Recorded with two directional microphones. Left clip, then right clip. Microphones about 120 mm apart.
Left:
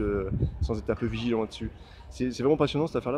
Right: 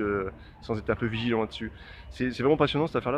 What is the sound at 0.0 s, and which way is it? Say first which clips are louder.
Speech: even; 25° left (ahead or behind).